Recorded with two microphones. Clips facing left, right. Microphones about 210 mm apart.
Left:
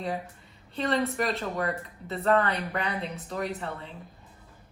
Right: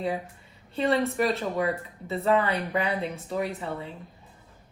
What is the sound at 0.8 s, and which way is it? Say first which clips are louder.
Speech: right 3 dB; 5° right (ahead or behind).